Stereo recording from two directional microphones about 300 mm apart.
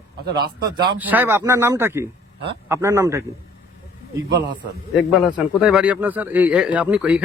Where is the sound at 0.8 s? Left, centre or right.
Centre.